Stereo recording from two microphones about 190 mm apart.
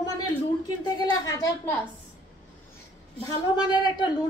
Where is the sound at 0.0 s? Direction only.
20° left (ahead or behind).